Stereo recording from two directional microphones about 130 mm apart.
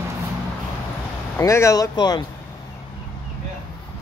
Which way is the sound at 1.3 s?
20° left (ahead or behind).